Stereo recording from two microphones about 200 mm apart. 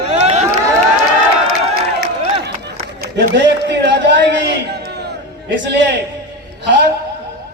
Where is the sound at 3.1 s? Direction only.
60° right (ahead or behind).